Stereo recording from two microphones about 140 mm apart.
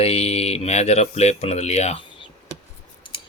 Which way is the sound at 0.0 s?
45° left (ahead or behind).